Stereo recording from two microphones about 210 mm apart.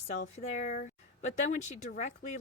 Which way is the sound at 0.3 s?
35° left (ahead or behind).